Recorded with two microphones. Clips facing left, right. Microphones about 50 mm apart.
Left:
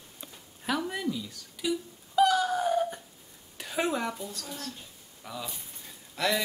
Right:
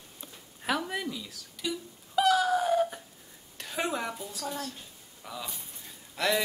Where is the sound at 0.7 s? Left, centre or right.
Centre.